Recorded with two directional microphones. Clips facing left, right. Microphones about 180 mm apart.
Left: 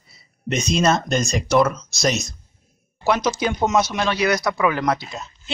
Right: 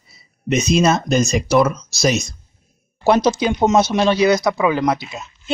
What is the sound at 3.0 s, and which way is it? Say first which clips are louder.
Speech: right 5 dB; 30° right (ahead or behind).